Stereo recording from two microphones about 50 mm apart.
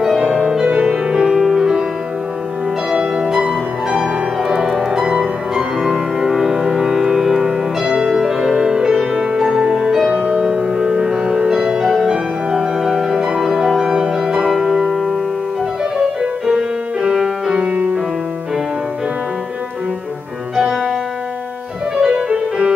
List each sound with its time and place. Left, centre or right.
0.0 s music: centre
0.7 s music: right
2.9 s music: centre
20.5 s music: centre
22.0 s music: centre